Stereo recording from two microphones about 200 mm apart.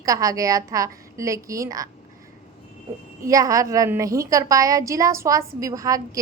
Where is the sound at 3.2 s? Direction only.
15° right (ahead or behind).